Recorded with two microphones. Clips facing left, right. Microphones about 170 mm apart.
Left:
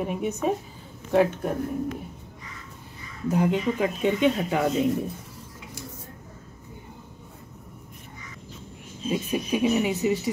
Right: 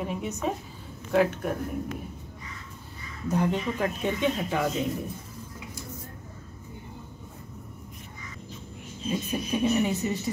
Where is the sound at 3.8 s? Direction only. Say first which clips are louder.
Left 5 dB; 15° left (ahead or behind).